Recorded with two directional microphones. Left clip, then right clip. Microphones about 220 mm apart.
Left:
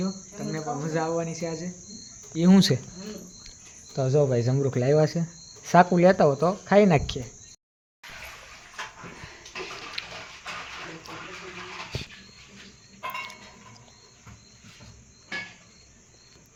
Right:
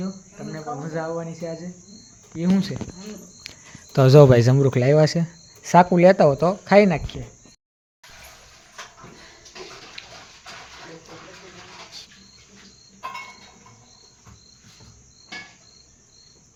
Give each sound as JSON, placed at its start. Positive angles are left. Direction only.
{"t": 0.0, "sound": "cricket", "side_deg": 5}
{"t": 2.5, "sound": "speech", "side_deg": 55}
{"t": 3.9, "sound": "speech", "side_deg": -40}
{"t": 7.1, "sound": "speech", "side_deg": 45}
{"t": 10.0, "sound": "a sound", "side_deg": 0}